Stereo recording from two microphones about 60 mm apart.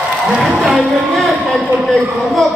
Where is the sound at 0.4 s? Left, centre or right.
Centre.